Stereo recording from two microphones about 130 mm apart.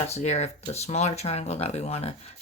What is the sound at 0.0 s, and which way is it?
Speech, 55° left (ahead or behind).